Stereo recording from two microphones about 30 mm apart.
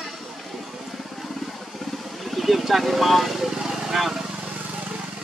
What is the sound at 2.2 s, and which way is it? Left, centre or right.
Vehicle, centre.